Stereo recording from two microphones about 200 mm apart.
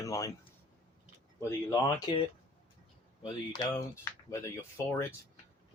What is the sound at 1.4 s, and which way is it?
Speech, 15° left (ahead or behind).